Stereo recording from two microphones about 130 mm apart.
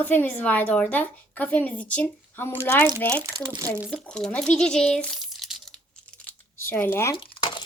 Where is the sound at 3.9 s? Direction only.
5° left (ahead or behind).